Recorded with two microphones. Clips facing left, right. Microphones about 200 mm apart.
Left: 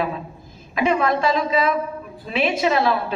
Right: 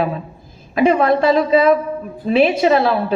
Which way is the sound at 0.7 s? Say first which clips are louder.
Right 6 dB; 50° right (ahead or behind).